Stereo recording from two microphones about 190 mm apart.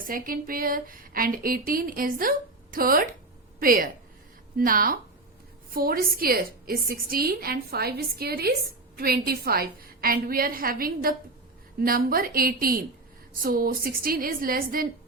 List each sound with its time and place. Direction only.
0.0 s a woman's voice: 45° right (ahead or behind)